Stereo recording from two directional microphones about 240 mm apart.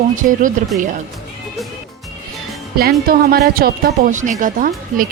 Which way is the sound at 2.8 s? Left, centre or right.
Right.